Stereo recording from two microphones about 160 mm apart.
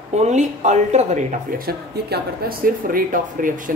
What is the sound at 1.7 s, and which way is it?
Speech, 80° right.